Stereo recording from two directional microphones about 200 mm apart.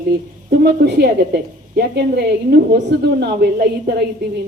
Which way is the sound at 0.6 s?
55° right (ahead or behind).